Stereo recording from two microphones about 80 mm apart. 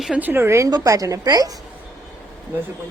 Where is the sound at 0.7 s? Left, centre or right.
Right.